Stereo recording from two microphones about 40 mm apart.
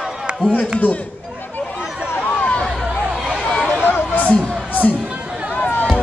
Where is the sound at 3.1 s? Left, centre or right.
Right.